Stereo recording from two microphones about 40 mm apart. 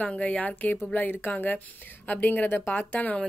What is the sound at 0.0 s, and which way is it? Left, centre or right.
Speech, left.